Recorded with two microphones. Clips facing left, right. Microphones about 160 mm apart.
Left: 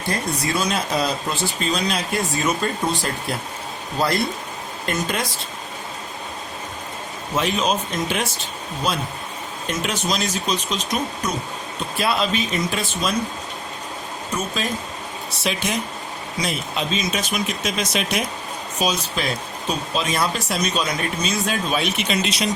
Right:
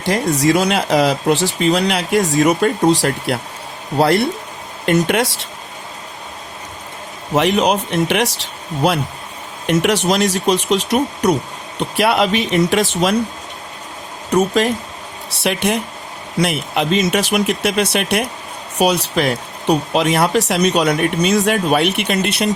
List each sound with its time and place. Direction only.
0.0 s speech: 80° right
7.3 s speech: 70° right (ahead or behind)
14.3 s speech: 75° right (ahead or behind)